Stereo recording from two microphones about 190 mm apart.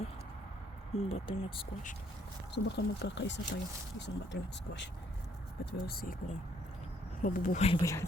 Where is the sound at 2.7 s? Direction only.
65° left (ahead or behind).